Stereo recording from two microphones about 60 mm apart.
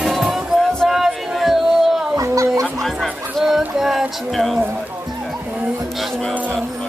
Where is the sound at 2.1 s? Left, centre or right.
Right.